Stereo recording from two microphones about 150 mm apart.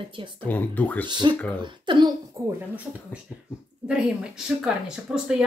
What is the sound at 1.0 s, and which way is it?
Speech, 30° right (ahead or behind).